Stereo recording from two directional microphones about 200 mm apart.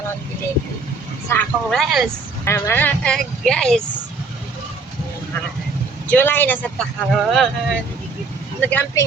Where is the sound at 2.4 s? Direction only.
15° left (ahead or behind).